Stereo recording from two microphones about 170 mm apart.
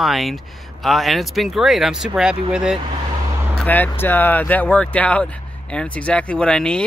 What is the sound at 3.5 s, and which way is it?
Speech, 10° left (ahead or behind).